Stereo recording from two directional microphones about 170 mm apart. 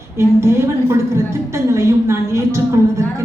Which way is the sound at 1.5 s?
15° right (ahead or behind).